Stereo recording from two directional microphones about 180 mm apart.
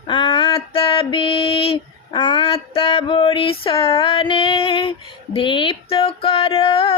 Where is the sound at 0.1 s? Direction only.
25° left (ahead or behind).